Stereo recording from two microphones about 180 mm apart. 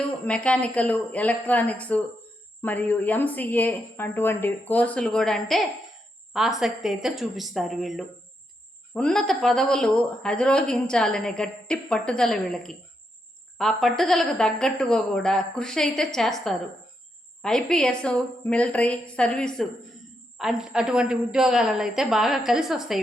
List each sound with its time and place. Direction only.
0.3 s a woman's voice: 5° left (ahead or behind)